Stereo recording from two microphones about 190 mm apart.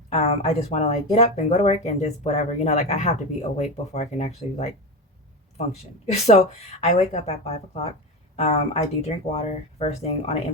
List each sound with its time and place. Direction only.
0.1 s speech: 30° left (ahead or behind)